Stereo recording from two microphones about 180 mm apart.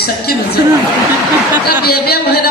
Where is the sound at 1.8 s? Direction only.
60° left (ahead or behind).